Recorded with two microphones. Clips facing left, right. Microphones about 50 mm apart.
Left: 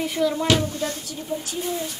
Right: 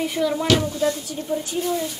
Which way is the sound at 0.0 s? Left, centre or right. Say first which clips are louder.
Even; centre.